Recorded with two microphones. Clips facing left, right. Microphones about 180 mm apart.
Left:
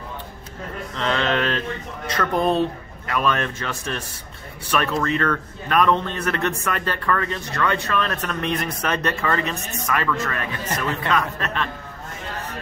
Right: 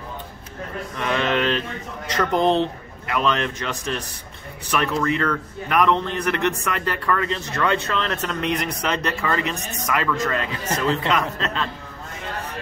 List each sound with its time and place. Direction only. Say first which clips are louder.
0.9 s speech: even; 15° right (ahead or behind)